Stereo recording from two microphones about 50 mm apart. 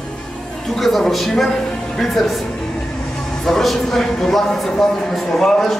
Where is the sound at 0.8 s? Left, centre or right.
Centre.